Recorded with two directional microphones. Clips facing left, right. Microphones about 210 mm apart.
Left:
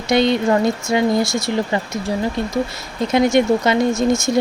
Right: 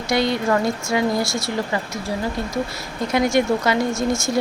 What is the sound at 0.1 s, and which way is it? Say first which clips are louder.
Speech: left 4 dB; 20° left (ahead or behind).